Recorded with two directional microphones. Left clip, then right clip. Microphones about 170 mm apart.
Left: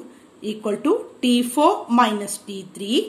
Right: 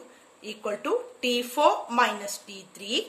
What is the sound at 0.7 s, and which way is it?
A woman's voice, centre (ahead or behind).